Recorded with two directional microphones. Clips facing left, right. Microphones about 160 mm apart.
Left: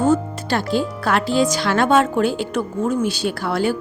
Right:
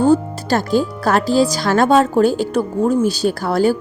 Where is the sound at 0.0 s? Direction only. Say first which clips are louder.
Right 4 dB; 35° right (ahead or behind).